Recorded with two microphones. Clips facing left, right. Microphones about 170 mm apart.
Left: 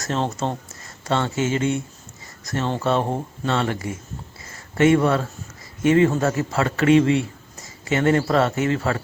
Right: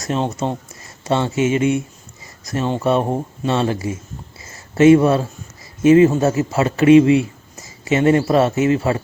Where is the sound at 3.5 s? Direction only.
25° right (ahead or behind).